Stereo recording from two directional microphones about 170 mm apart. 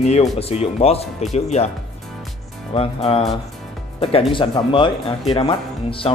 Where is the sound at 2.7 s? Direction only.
35° left (ahead or behind).